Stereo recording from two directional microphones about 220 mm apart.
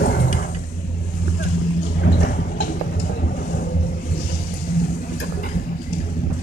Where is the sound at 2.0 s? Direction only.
45° left (ahead or behind).